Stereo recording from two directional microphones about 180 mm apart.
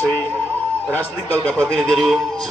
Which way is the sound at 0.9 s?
10° left (ahead or behind).